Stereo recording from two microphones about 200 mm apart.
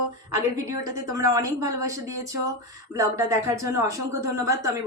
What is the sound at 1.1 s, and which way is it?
Speech, 15° right (ahead or behind).